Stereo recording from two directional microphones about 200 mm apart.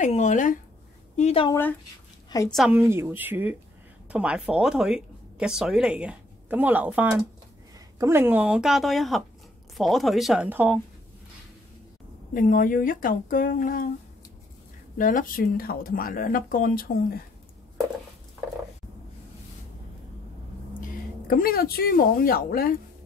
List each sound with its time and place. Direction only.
0.0 s speech: 35° left (ahead or behind)
1.5 s speech: 10° left (ahead or behind)
2.5 s speech: 5° right (ahead or behind)
12.4 s speech: 45° left (ahead or behind)
15.0 s speech: 40° left (ahead or behind)
21.3 s speech: 45° left (ahead or behind)